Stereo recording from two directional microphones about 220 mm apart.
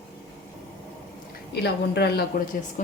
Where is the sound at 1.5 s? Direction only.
50° left (ahead or behind).